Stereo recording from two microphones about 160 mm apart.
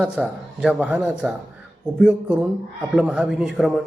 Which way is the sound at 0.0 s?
5° right (ahead or behind).